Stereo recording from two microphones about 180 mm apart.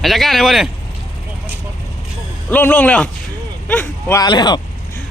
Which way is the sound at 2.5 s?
10° left (ahead or behind).